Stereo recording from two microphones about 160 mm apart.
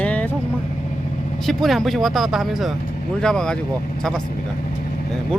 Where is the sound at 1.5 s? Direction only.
Centre (ahead or behind).